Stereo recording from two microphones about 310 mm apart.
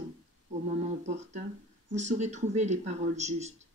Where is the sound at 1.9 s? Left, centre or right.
Right.